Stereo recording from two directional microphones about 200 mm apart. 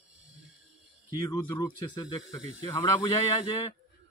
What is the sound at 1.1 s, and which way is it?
Speech, 15° left (ahead or behind).